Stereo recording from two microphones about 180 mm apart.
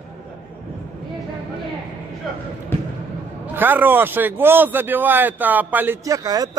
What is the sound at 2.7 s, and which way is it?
Basketball bounce, 15° left (ahead or behind).